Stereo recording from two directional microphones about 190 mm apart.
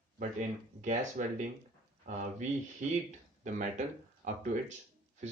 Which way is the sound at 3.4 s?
40° right (ahead or behind).